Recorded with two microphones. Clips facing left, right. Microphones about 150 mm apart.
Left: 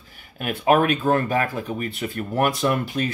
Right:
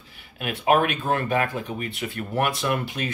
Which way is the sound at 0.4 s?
40° left (ahead or behind).